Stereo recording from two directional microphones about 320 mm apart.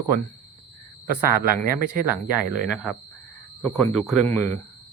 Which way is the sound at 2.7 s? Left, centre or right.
Centre.